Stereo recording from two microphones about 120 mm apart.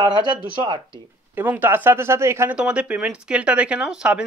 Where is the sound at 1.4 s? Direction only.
15° right (ahead or behind).